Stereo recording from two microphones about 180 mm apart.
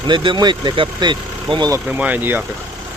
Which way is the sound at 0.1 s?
25° right (ahead or behind).